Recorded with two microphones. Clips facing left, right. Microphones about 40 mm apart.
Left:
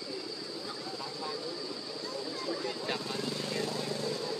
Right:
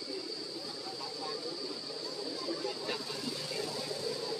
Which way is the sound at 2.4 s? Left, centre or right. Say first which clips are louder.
Left 2 dB; left.